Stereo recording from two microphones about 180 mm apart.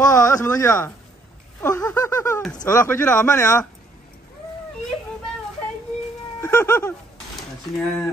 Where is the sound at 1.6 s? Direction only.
15° left (ahead or behind).